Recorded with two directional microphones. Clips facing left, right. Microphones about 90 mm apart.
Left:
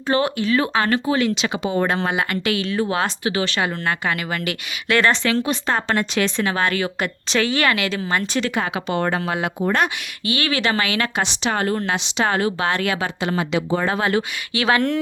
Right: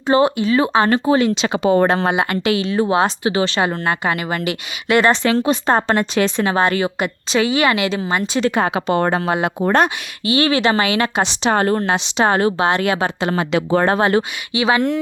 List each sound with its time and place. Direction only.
0.1 s speech: 25° right (ahead or behind)
1.5 s a woman's voice: 50° right (ahead or behind)
1.9 s speech: 30° right (ahead or behind)
5.2 s speech: 35° right (ahead or behind)
7.0 s speech: 15° right (ahead or behind); by 12.6 s 35° right (ahead or behind)
12.6 s speech: 25° right (ahead or behind)
13.0 s a woman's voice: 45° right (ahead or behind)
13.6 s speech: 65° right (ahead or behind)
13.9 s speech: 35° right (ahead or behind)
14.5 s speech: 5° right (ahead or behind)